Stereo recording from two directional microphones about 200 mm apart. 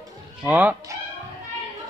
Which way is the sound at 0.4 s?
5° right (ahead or behind).